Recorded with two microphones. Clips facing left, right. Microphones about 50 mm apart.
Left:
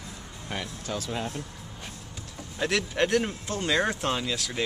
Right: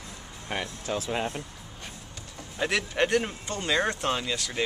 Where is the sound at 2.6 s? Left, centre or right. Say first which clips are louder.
Even; centre.